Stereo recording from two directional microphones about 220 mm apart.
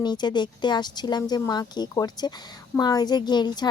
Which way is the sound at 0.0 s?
20° left (ahead or behind).